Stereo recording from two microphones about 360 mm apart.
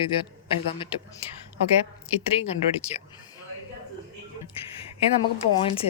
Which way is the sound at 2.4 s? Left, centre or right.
Centre.